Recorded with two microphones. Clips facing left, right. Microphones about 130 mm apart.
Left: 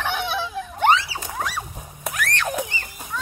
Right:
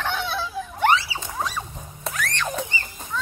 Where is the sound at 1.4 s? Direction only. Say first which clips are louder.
Even; 10° left (ahead or behind).